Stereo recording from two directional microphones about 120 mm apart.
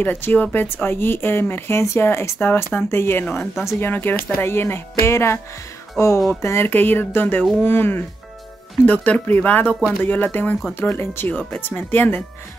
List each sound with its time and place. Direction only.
0.0 s speech: 15° left (ahead or behind)